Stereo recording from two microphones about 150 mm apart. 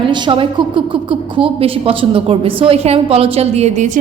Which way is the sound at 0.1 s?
30° right (ahead or behind).